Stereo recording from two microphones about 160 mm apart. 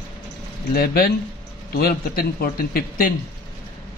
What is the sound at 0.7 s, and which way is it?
A man's voice, 70° left (ahead or behind).